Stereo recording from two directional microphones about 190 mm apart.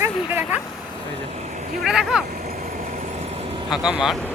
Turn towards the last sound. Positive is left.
turn(degrees=-5)  # may be behind; listen again after turning